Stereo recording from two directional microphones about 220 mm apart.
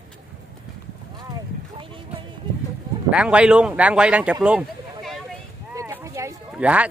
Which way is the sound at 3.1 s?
5° right (ahead or behind).